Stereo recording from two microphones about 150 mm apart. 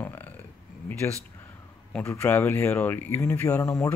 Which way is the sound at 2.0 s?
15° left (ahead or behind).